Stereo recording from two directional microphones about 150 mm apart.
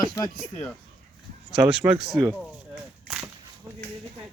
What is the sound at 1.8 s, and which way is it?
Speech, 15° right (ahead or behind).